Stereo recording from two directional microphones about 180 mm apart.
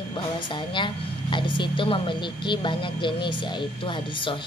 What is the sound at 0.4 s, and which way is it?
A woman's voice, 25° left (ahead or behind).